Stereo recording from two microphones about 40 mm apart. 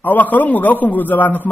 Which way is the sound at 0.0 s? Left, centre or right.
Left.